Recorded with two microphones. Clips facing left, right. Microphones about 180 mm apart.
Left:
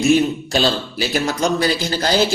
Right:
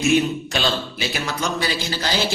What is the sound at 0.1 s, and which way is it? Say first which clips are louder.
Speech: left 4 dB; 35° left (ahead or behind).